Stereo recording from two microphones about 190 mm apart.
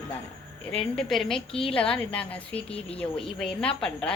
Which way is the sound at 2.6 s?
30° left (ahead or behind).